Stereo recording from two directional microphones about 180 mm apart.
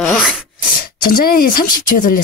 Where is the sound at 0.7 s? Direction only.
55° left (ahead or behind).